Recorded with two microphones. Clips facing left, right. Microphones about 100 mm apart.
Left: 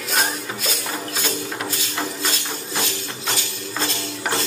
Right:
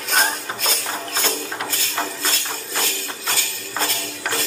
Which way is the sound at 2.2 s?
20° left (ahead or behind).